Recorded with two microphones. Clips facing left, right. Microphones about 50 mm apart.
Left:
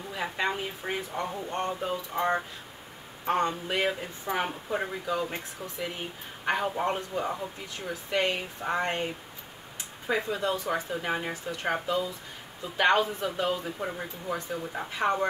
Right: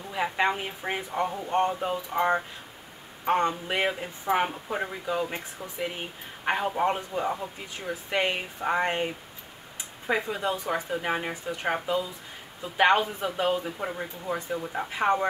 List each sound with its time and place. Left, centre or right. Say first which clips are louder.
0.1 s speech: right 4 dB; centre
4.7 s speech: left 1 dB; centre
5.1 s speech: right 2 dB; centre
11.6 s speech: right 1 dB; centre